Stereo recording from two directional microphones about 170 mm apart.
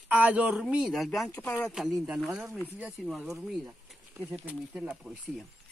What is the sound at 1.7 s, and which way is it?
Speech, 5° right (ahead or behind).